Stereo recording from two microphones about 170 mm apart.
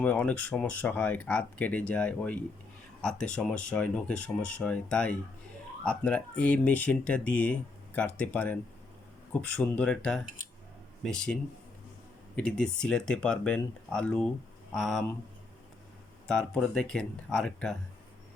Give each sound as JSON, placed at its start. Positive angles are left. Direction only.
{"t": 0.0, "sound": "speech", "side_deg": 10}
{"t": 12.4, "sound": "speech", "side_deg": 5}
{"t": 16.2, "sound": "speech", "side_deg": 5}